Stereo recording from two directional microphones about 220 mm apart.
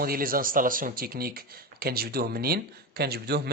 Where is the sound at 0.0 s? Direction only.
40° right (ahead or behind).